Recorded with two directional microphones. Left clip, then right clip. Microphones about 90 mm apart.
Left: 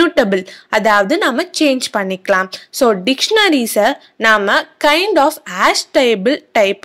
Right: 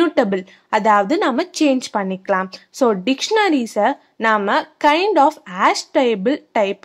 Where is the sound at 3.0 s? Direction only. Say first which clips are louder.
Left 4 dB; 10° left (ahead or behind).